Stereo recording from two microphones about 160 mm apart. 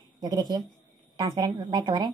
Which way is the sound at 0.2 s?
25° right (ahead or behind).